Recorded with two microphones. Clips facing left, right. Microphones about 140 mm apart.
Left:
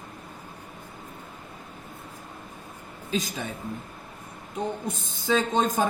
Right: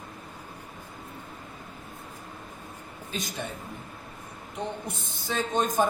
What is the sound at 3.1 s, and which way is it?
Speech, 90° left.